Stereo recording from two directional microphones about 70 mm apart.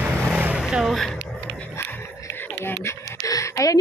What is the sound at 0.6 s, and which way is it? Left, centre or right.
Vehicle, centre.